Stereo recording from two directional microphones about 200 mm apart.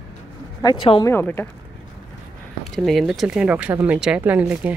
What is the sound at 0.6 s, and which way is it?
Speech, 25° left (ahead or behind).